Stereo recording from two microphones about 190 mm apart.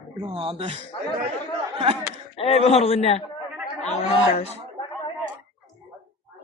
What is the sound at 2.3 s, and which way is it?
A man's voice, 30° left (ahead or behind).